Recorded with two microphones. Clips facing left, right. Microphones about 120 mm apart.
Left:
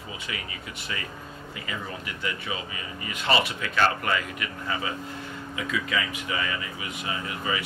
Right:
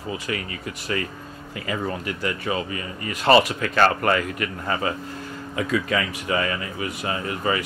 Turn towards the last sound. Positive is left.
turn(degrees=-50)  # may be behind; listen again after turning